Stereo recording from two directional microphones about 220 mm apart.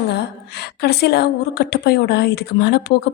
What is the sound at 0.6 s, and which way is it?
A woman's voice, 45° left (ahead or behind).